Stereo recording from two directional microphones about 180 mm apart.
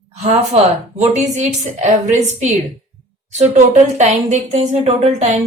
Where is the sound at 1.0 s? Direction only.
40° right (ahead or behind).